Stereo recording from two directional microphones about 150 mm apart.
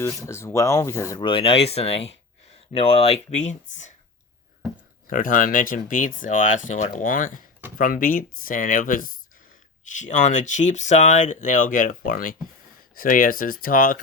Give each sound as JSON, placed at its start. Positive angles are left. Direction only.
{"t": 0.0, "sound": "speech", "side_deg": 20}
{"t": 1.2, "sound": "speech", "side_deg": 35}
{"t": 3.3, "sound": "speech", "side_deg": 50}
{"t": 5.0, "sound": "speech", "side_deg": 65}
{"t": 9.9, "sound": "speech", "side_deg": 55}